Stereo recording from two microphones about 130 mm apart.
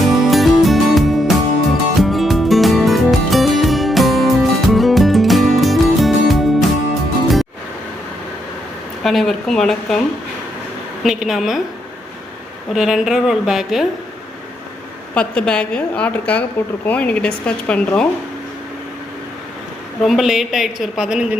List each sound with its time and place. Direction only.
0.0 s music: centre (ahead or behind)
9.0 s a woman's voice: centre (ahead or behind)
11.0 s a woman's voice: 5° right (ahead or behind)
12.7 s a woman's voice: 5° right (ahead or behind)
15.1 s a woman's voice: 10° left (ahead or behind)
20.0 s a woman's voice: centre (ahead or behind)